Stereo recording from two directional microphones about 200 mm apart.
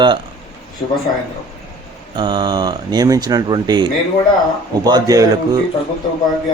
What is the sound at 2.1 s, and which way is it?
Speech, 20° right (ahead or behind).